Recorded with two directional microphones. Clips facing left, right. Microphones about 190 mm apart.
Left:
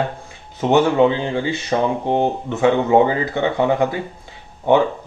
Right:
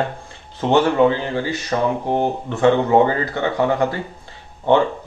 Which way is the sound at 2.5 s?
10° left (ahead or behind).